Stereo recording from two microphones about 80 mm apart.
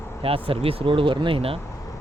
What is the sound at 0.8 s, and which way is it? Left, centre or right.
Speech, right.